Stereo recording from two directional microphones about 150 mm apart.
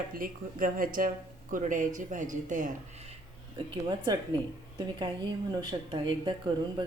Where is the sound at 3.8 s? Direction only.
30° right (ahead or behind).